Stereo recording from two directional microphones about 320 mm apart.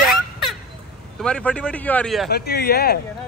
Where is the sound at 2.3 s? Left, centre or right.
Left.